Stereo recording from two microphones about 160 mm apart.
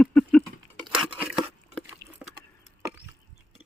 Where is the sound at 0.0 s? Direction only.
5° left (ahead or behind).